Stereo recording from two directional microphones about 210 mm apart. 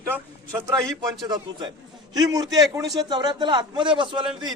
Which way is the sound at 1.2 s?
20° right (ahead or behind).